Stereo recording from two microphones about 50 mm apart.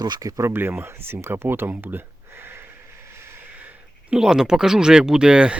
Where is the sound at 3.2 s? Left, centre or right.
Right.